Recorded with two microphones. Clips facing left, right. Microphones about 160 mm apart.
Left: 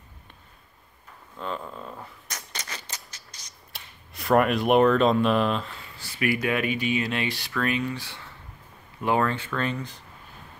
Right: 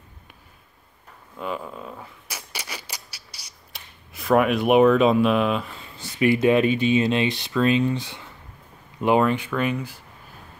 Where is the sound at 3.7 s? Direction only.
Centre (ahead or behind).